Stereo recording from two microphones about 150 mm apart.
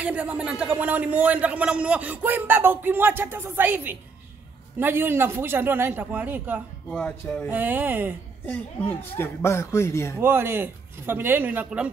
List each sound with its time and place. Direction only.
0.0 s a man's voice: 10° right (ahead or behind)
6.9 s speech: 10° left (ahead or behind)
7.4 s a man's voice: 10° right (ahead or behind)
8.5 s speech: 10° left (ahead or behind)
10.2 s a man's voice: 15° right (ahead or behind)